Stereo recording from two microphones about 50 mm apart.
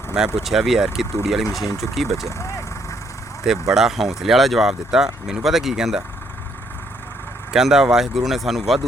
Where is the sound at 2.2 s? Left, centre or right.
Left.